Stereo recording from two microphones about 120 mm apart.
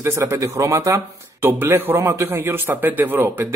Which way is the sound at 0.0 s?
20° right (ahead or behind).